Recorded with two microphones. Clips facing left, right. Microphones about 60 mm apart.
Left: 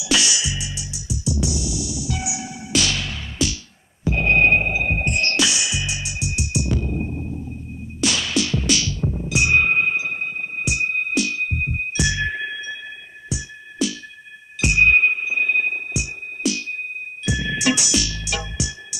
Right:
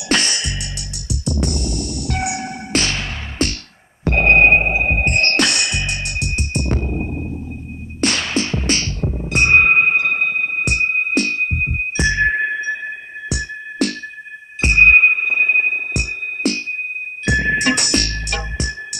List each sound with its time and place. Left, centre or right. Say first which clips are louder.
0.0 s music: right 2 dB; right
4.0 s sonar: right 5 dB; right
5.0 s music: right 4 dB; right
6.9 s sonar: right 3 dB; right
8.0 s music: right 2 dB; right
13.3 s music: right 5 dB; right
14.6 s music: right 5 dB; right
15.9 s music: right 5 dB; right